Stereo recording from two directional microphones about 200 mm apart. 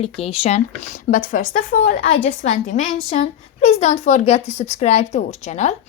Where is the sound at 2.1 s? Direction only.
30° left (ahead or behind).